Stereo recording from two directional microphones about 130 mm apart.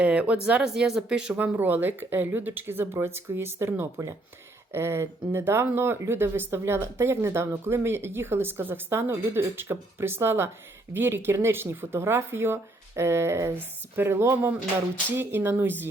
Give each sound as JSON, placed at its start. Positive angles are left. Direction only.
{"t": 0.0, "sound": "speech", "side_deg": -10}